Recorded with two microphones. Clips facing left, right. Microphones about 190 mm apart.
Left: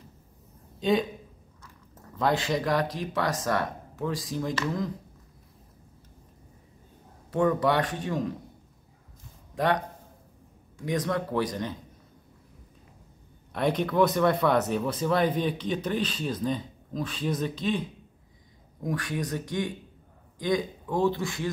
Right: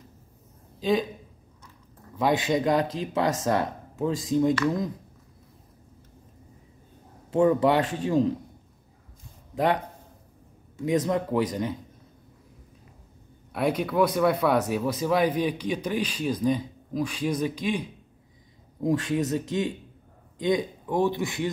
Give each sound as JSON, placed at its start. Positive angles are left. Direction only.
{"t": 0.7, "sound": "speech", "side_deg": 0}
{"t": 2.1, "sound": "speech", "side_deg": -15}
{"t": 7.2, "sound": "speech", "side_deg": -25}
{"t": 10.9, "sound": "speech", "side_deg": -25}
{"t": 13.5, "sound": "speech", "side_deg": -5}
{"t": 18.8, "sound": "a man's voice", "side_deg": -25}